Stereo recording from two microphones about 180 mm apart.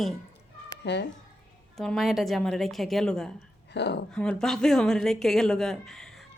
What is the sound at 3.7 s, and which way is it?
Speech, 70° left (ahead or behind).